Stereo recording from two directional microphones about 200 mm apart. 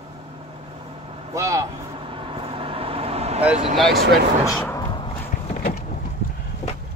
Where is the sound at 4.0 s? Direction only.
55° right (ahead or behind).